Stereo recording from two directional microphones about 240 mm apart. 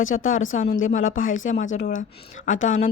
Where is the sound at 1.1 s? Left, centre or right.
Left.